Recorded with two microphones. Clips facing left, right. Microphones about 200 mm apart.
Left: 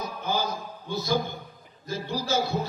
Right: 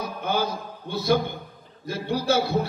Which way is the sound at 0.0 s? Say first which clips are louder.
Right 3 dB; 60° right (ahead or behind).